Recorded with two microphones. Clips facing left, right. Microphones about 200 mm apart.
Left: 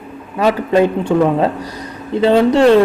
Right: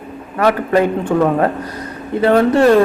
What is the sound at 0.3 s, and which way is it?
Speech, 20° left (ahead or behind).